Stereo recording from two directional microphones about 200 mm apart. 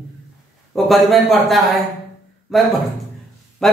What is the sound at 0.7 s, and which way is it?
Speech, centre (ahead or behind).